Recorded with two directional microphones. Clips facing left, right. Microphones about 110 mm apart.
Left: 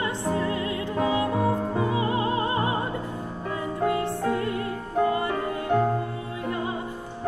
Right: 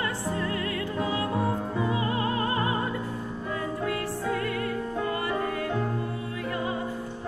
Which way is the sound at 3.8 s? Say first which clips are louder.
Left 7 dB; 25° left (ahead or behind).